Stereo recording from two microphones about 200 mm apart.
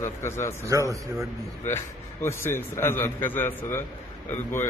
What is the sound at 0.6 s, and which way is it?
Speech, 15° right (ahead or behind).